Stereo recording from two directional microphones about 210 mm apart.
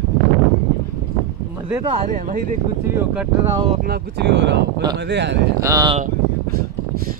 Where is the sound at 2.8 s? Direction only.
10° right (ahead or behind).